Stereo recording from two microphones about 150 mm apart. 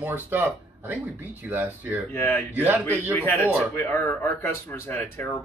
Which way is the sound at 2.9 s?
15° left (ahead or behind).